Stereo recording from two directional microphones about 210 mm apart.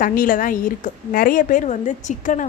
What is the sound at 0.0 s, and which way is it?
A woman's voice, 40° left (ahead or behind).